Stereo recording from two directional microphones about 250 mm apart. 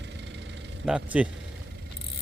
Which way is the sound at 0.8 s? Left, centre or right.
Centre.